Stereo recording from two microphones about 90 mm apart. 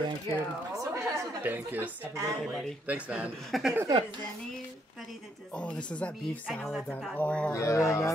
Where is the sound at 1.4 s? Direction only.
20° right (ahead or behind).